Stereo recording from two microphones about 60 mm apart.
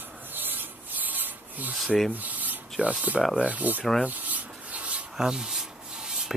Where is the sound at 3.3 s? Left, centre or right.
Right.